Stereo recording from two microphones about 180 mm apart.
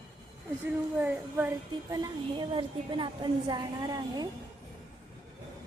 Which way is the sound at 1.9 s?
25° right (ahead or behind).